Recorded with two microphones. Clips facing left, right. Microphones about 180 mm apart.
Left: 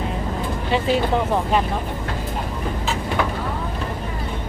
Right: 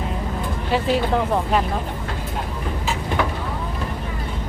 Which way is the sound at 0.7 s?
Centre (ahead or behind).